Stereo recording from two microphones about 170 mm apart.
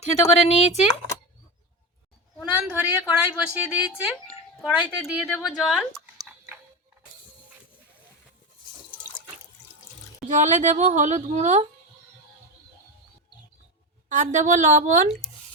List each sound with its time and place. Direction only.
0.3 s speech: 40° left (ahead or behind)
2.4 s a woman's voice: 5° right (ahead or behind)
10.2 s a woman's voice: 45° right (ahead or behind)
14.1 s a woman's voice: 45° right (ahead or behind)